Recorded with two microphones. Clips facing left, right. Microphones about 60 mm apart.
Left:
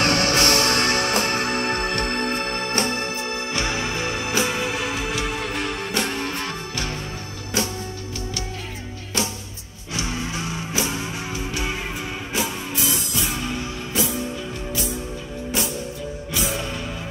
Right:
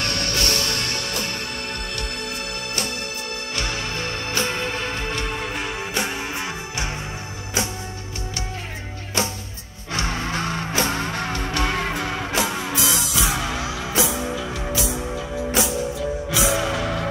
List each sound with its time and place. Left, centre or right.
0.0 s music: left
3.5 s music: centre
9.9 s music: right